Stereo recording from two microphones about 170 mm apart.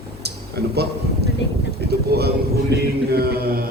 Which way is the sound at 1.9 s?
70° right (ahead or behind).